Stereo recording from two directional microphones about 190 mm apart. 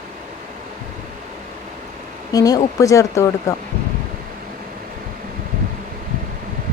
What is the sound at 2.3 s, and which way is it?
Speech, 20° left (ahead or behind).